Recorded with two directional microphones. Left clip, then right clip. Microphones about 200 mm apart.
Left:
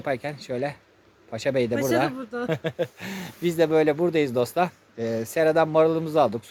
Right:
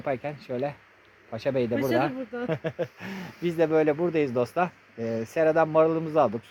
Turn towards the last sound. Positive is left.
turn(degrees=-5)  # may be behind; listen again after turning